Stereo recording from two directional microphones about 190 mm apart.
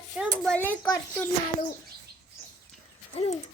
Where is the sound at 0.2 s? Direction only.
5° left (ahead or behind).